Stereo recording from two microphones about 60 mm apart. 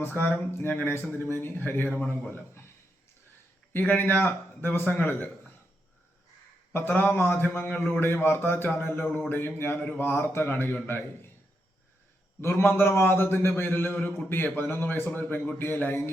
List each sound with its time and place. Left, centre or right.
0.0 s speech: left
3.7 s speech: left
6.7 s speech: left
12.4 s speech: left